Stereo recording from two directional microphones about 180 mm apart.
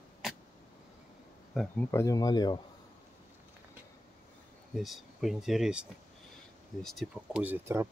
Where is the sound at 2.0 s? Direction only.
20° left (ahead or behind).